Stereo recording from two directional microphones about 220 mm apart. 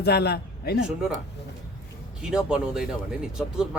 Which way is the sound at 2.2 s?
5° right (ahead or behind).